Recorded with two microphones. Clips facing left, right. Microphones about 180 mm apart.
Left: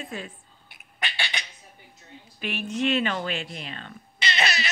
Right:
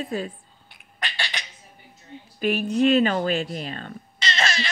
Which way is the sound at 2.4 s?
40° right (ahead or behind).